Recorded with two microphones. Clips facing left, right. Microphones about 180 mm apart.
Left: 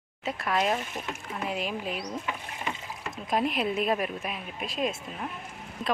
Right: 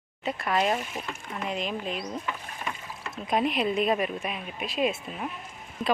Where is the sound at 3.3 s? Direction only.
Centre (ahead or behind).